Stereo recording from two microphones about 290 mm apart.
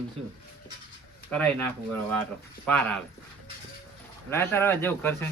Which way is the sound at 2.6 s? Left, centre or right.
Centre.